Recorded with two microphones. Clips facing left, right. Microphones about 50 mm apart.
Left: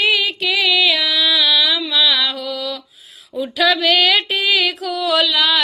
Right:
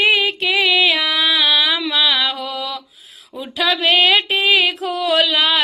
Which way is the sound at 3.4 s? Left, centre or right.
Right.